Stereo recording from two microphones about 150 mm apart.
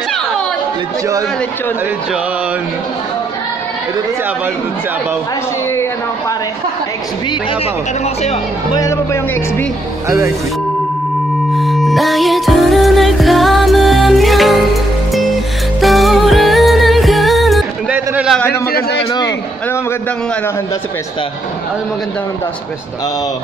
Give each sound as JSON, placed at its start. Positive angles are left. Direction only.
{"t": 8.0, "sound": "speech", "side_deg": 45}
{"t": 8.7, "sound": "speech", "side_deg": 20}
{"t": 10.0, "sound": "speech", "side_deg": -20}
{"t": 11.5, "sound": "music", "side_deg": 0}
{"t": 17.9, "sound": "a sound", "side_deg": -10}
{"t": 18.7, "sound": "a man's voice", "side_deg": 90}
{"t": 19.1, "sound": "a man's voice", "side_deg": 20}